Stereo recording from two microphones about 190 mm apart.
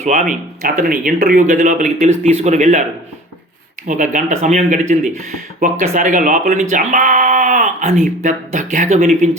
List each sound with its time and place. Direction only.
0.0 s speech: 40° right (ahead or behind)
3.8 s speech: 40° right (ahead or behind)